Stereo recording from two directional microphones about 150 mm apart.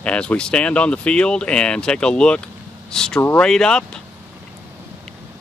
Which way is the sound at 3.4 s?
5° left (ahead or behind).